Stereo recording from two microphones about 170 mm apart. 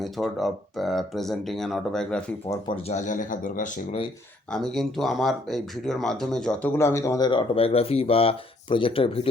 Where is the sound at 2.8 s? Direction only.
45° left (ahead or behind).